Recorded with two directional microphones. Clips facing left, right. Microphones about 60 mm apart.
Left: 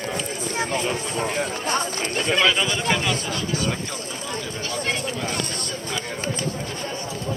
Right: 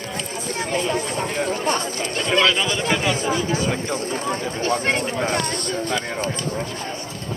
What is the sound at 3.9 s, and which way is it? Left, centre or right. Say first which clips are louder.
Speech: right 7 dB; right.